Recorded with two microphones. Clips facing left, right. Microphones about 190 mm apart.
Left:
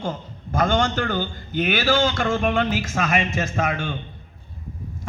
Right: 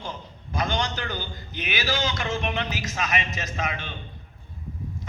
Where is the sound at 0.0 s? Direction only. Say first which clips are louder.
Left 8 dB; 50° left (ahead or behind).